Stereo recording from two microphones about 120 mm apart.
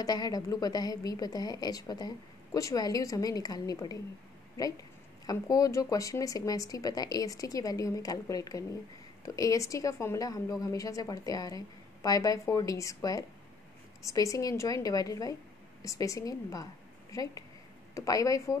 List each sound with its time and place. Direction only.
0.0 s a woman's voice: 35° left (ahead or behind)